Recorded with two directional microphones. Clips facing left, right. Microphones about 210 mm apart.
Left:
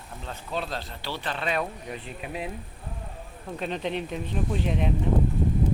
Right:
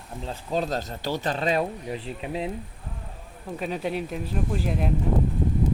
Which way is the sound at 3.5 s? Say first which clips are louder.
Right 1 dB; 5° right (ahead or behind).